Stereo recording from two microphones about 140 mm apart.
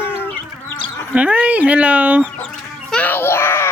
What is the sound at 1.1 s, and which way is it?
Speech, 10° right (ahead or behind).